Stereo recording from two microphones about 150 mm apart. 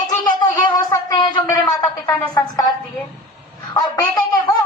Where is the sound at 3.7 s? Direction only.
25° left (ahead or behind).